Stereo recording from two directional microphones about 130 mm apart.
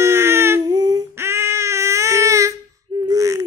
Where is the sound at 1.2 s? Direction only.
20° right (ahead or behind).